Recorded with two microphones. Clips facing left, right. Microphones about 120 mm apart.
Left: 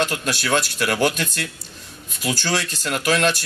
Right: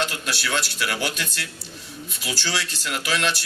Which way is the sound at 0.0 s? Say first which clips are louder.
Left 4 dB; 45° left (ahead or behind).